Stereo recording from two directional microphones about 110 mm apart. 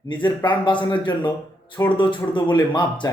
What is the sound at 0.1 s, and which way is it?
Speech, 45° left (ahead or behind).